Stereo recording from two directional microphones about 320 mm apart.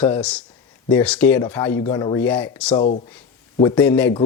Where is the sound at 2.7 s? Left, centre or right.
Centre.